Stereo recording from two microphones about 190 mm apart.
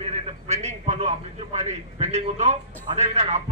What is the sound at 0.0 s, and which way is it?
A man's voice, 35° right (ahead or behind).